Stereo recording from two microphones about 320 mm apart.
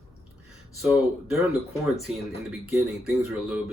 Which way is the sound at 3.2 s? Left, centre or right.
Centre.